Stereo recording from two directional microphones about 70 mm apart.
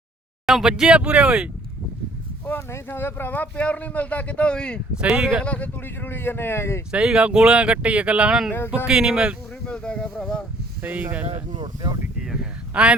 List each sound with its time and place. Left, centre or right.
0.4 s speech: centre
2.5 s speech: left; by 4.8 s centre
4.9 s speech: centre
5.4 s speech: left
6.9 s speech: centre
9.6 s speech: centre
10.8 s speech: right
12.7 s speech: centre